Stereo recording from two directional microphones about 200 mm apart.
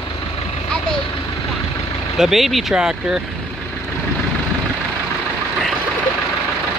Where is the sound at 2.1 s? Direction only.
Centre (ahead or behind).